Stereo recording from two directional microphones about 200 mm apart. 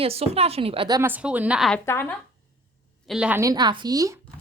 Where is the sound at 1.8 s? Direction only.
10° left (ahead or behind).